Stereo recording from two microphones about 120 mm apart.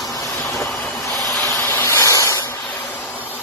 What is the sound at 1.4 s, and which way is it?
Spray, 25° left (ahead or behind).